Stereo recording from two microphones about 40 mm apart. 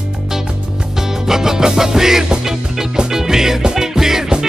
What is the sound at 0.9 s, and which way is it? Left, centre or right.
Music, centre.